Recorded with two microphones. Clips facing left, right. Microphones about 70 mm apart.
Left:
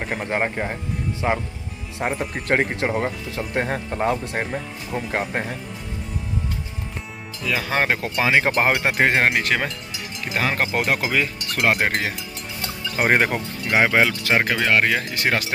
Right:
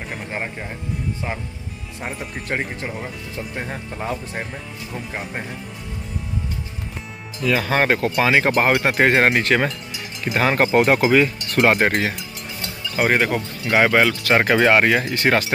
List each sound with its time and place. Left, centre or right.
0.2 s speech: left
1.2 s speech: left
2.0 s speech: left
7.4 s speech: centre
13.0 s speech: centre
14.4 s speech: centre
15.1 s speech: centre